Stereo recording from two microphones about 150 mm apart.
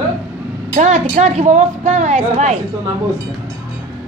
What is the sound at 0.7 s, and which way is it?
Speech, 50° right (ahead or behind).